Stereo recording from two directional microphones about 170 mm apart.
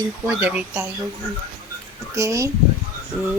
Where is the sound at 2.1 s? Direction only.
20° right (ahead or behind).